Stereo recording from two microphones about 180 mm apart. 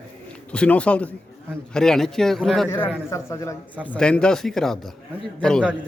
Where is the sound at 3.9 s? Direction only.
5° left (ahead or behind).